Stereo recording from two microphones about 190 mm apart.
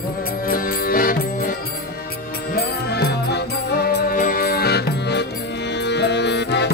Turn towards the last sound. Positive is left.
turn(degrees=65)  # may be behind; listen again after turning